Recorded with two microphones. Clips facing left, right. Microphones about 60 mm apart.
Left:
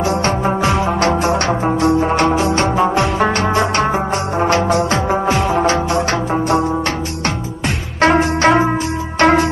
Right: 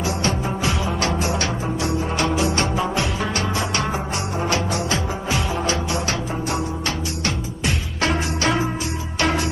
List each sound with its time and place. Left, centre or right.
0.0 s music: left
8.0 s music: left